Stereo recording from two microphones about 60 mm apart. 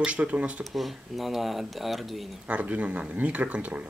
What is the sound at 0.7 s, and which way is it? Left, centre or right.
Speech, centre.